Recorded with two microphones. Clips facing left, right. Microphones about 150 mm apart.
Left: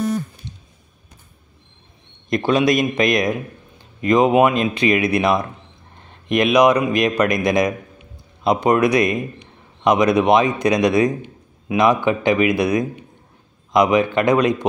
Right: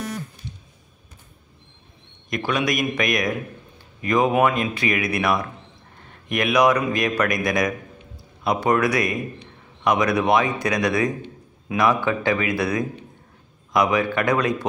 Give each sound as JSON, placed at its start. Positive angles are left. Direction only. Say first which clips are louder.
{"t": 2.2, "sound": "a man's voice", "louder": "left 7 dB", "side_deg": 30}